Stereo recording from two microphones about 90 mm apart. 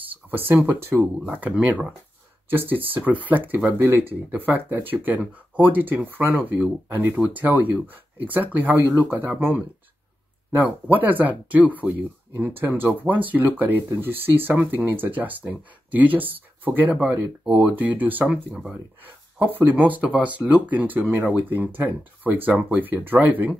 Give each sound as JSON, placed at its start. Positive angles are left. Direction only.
{"t": 0.0, "sound": "speech", "side_deg": -20}
{"t": 18.5, "sound": "speech", "side_deg": 0}
{"t": 19.3, "sound": "speech", "side_deg": -20}